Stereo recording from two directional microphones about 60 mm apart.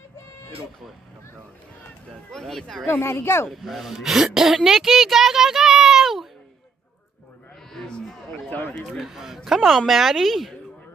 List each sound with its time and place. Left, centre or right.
2.3 s a woman's voice: centre
2.9 s speech: left
3.4 s a woman's voice: centre
4.6 s a sound: centre
7.7 s a sound: centre
8.5 s speech: left
8.8 s a woman's voice: centre